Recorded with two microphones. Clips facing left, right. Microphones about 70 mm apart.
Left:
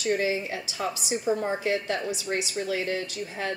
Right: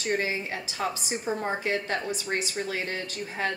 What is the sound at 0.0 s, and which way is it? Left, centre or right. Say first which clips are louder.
A woman's voice: left 2 dB; right.